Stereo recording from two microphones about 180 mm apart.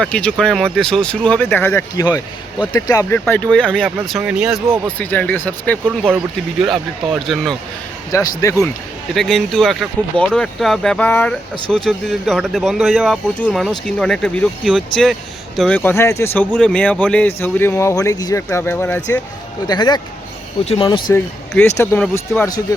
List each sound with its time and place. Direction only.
0.0 s speech: 5° left (ahead or behind)
4.9 s speech: 10° left (ahead or behind)
8.1 s speech: 20° left (ahead or behind)
9.1 s speech: 5° left (ahead or behind)
19.6 s speech: 25° left (ahead or behind)